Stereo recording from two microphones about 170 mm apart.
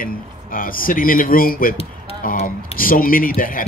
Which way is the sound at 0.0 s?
55° left (ahead or behind).